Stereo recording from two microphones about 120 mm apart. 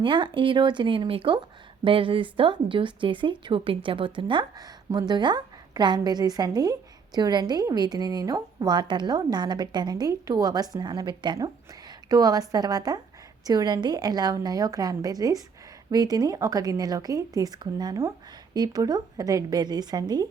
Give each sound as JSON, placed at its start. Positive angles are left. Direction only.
{"t": 0.0, "sound": "a woman's voice", "side_deg": -45}